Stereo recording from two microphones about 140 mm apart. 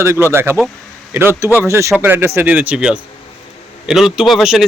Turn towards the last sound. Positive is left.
turn(degrees=-5)  # may be behind; listen again after turning